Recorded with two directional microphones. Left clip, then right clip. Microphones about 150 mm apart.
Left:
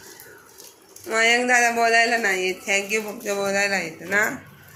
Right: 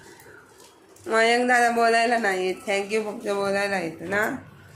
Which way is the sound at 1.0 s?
30° right (ahead or behind).